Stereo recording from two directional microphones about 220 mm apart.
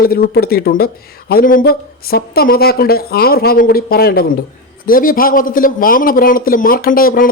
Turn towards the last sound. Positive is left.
turn(degrees=40)  # may be behind; listen again after turning